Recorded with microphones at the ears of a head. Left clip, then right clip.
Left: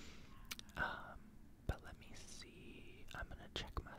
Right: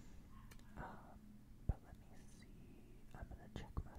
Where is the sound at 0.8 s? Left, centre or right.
Left.